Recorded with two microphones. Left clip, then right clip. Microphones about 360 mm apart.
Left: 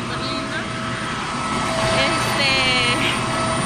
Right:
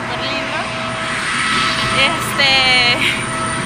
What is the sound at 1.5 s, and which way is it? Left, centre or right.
Vehicle, left.